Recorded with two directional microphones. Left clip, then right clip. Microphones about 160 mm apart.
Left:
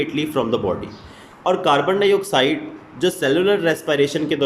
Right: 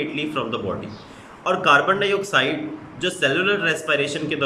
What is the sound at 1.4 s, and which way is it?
A man's voice, 25° left (ahead or behind).